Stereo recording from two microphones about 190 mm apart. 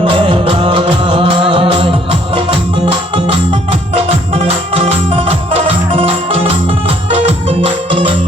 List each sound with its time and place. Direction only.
0.1 s music: 25° right (ahead or behind)